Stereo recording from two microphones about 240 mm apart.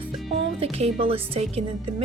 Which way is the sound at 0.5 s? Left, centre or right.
Right.